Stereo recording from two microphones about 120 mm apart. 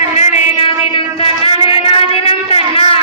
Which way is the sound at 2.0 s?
50° left (ahead or behind).